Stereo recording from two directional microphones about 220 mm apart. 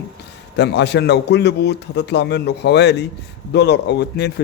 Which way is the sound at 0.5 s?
50° left (ahead or behind).